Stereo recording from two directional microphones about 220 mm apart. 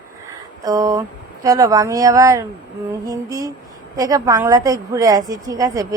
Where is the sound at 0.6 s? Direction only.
15° right (ahead or behind).